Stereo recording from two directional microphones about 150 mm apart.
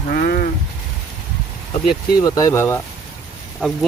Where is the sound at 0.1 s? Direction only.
75° left (ahead or behind).